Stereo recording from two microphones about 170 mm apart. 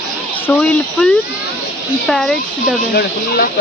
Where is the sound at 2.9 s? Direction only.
65° left (ahead or behind).